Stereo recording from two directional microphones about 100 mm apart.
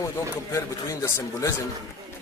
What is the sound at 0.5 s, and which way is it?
A man's voice, 30° left (ahead or behind).